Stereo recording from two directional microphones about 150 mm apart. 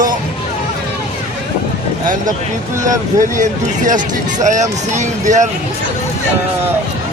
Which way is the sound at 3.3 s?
55° right (ahead or behind).